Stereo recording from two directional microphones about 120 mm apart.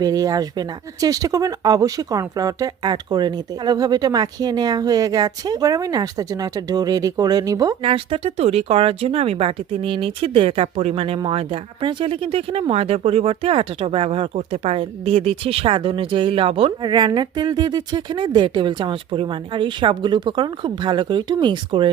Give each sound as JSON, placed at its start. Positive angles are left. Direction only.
{"t": 0.0, "sound": "speech", "side_deg": -30}
{"t": 7.8, "sound": "speech", "side_deg": -50}
{"t": 14.3, "sound": "speech", "side_deg": -65}